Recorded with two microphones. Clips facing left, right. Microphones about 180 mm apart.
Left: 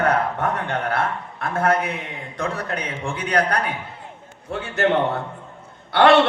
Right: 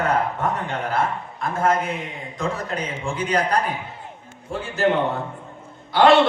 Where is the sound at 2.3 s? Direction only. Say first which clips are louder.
Even; 65° left (ahead or behind).